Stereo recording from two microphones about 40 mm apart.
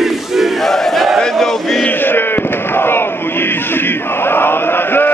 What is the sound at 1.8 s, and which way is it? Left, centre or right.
Crowd, left.